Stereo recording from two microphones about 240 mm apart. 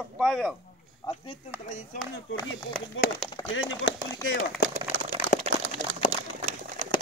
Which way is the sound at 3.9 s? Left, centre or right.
Left.